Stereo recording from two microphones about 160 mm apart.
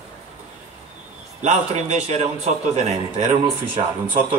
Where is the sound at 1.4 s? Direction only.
45° right (ahead or behind).